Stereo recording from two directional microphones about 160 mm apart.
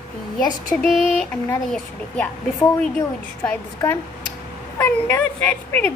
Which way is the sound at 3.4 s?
15° left (ahead or behind).